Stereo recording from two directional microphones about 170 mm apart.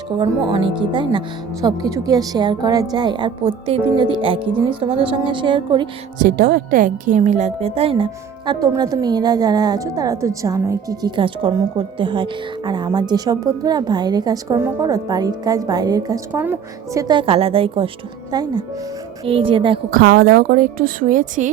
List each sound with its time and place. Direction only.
0.2 s a woman's voice: 30° right (ahead or behind)
6.2 s a woman's voice: 60° right (ahead or behind); by 19.8 s 30° right (ahead or behind)
19.9 s speech: 60° right (ahead or behind)